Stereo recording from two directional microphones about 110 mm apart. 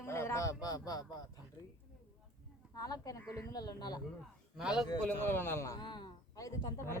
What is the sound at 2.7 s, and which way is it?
Speech, 35° left (ahead or behind).